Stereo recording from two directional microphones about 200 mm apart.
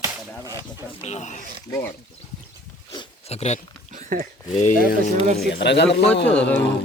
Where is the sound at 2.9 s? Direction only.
25° left (ahead or behind).